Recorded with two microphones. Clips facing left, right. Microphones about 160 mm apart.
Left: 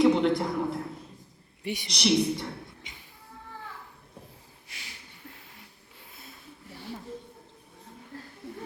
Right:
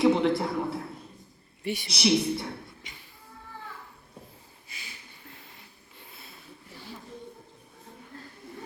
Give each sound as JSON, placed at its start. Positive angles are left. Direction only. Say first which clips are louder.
{"t": 0.0, "sound": "a man's voice", "louder": "left 1 dB", "side_deg": 0}
{"t": 1.6, "sound": "a woman's voice", "louder": "right 2 dB", "side_deg": 15}
{"t": 1.9, "sound": "a woman's voice", "louder": "even", "side_deg": -5}
{"t": 2.8, "sound": "music", "louder": "right 1 dB", "side_deg": 20}
{"t": 4.7, "sound": "a sound", "louder": "right 1 dB", "side_deg": 85}